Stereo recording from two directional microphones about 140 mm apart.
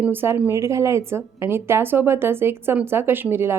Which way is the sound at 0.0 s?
15° right (ahead or behind).